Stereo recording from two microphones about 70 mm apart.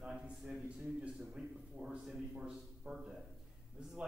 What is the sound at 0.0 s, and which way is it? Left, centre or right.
A man's voice, centre.